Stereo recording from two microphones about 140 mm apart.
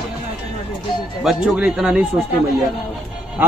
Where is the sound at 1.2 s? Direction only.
5° right (ahead or behind).